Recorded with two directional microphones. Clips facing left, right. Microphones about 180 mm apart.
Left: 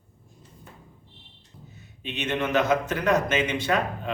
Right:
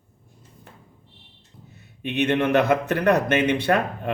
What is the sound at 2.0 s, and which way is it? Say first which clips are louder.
A man's voice: right 7 dB; 60° right (ahead or behind).